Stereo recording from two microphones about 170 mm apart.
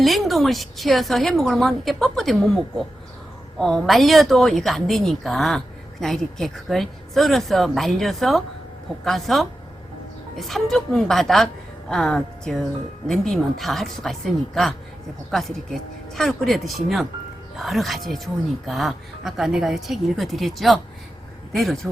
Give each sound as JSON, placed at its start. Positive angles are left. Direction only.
{"t": 0.0, "sound": "a woman's voice", "side_deg": 0}